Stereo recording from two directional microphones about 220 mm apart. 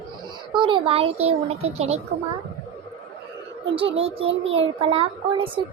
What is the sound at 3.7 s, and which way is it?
A child's voice, 25° right (ahead or behind).